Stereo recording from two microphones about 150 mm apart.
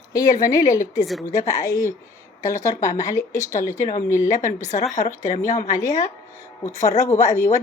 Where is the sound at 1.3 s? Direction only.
20° left (ahead or behind).